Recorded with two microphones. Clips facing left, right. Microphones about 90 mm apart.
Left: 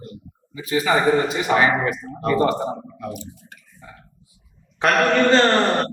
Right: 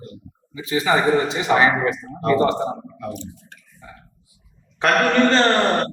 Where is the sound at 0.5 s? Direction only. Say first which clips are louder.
Even; 25° right (ahead or behind).